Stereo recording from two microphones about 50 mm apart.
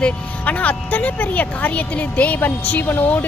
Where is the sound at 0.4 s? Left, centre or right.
Left.